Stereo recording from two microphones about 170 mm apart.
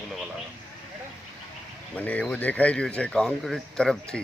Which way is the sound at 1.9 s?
10° left (ahead or behind).